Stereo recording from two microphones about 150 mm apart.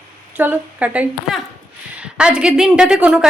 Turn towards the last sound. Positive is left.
turn(degrees=-5)  # may be behind; listen again after turning